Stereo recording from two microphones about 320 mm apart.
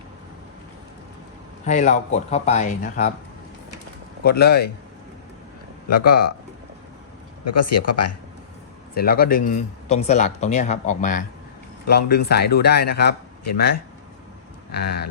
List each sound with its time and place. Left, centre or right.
1.6 s speech: left
4.2 s speech: left
5.9 s speech: left
7.4 s speech: left
9.0 s speech: left
13.4 s speech: left